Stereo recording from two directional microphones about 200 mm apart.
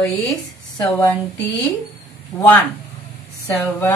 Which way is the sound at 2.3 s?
10° left (ahead or behind).